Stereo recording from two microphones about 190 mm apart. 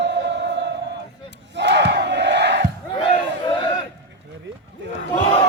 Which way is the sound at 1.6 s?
65° right (ahead or behind).